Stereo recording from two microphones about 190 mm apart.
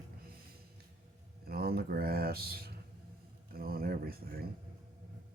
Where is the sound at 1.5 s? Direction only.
55° right (ahead or behind).